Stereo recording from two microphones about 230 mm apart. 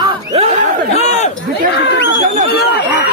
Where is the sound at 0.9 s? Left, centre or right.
Left.